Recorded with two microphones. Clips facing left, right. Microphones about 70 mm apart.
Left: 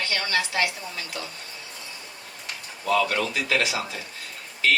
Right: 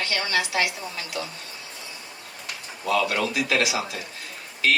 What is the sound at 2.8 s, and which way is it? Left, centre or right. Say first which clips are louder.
Speech: even; centre.